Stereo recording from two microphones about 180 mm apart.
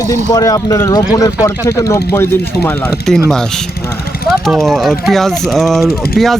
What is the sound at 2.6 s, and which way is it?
Speech, 5° left (ahead or behind).